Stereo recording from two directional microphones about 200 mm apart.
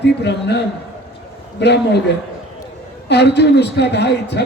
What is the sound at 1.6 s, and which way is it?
A man's voice, 60° left (ahead or behind).